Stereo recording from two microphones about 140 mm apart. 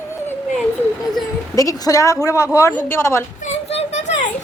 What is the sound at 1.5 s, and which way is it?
Speech, 25° left (ahead or behind).